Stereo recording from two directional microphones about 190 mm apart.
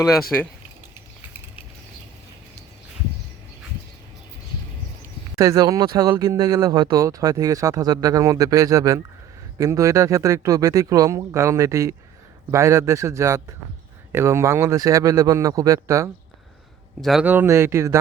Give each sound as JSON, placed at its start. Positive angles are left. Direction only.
{"t": 0.3, "sound": "speech", "side_deg": 10}
{"t": 5.4, "sound": "speech", "side_deg": -20}
{"t": 17.0, "sound": "speech", "side_deg": 0}